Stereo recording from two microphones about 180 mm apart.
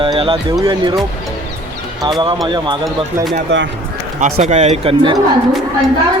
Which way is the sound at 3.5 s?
70° right (ahead or behind).